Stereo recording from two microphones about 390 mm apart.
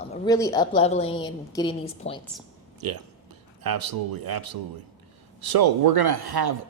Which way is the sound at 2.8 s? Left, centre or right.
Right.